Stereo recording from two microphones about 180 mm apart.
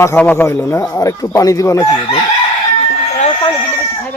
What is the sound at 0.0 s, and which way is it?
Speech, 10° left (ahead or behind).